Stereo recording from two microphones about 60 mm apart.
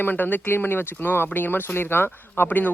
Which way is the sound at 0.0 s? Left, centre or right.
Left.